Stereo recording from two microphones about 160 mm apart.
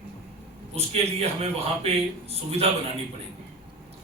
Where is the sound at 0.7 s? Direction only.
40° right (ahead or behind).